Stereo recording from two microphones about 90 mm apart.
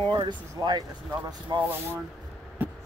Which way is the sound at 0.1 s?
55° right (ahead or behind).